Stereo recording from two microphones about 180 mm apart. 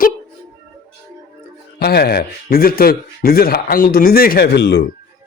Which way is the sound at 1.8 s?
60° left (ahead or behind).